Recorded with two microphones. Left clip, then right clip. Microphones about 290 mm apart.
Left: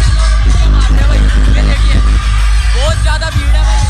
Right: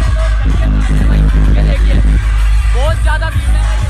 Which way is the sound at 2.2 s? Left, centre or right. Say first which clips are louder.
Left 5 dB; left.